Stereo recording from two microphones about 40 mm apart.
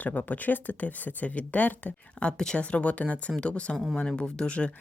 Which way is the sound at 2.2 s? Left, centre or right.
Left.